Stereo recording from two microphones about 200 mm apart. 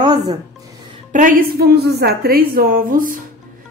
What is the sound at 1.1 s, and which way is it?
A woman's voice, 40° right (ahead or behind).